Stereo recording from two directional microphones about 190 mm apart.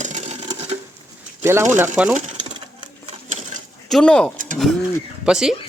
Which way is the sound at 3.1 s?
35° right (ahead or behind).